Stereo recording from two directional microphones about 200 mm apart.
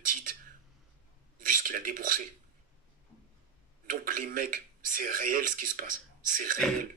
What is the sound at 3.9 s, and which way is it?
A man's voice, 45° right (ahead or behind).